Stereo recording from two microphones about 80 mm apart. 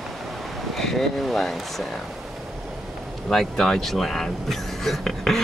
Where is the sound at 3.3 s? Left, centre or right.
Centre.